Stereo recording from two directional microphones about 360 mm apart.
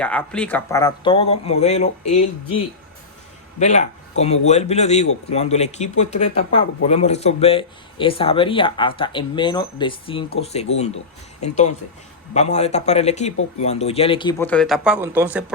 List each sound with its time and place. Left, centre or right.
0.0 s speech: centre
3.6 s speech: centre